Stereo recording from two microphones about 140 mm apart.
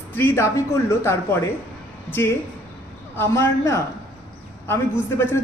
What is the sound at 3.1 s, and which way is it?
A man's voice, 20° left (ahead or behind).